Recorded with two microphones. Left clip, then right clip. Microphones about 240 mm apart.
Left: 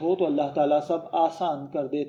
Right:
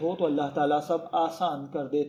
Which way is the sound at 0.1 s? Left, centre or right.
Right.